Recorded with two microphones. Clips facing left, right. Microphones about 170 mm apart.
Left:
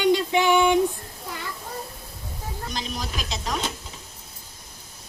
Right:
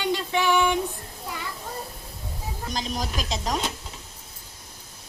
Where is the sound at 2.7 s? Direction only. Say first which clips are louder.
Right 3 dB; 40° right (ahead or behind).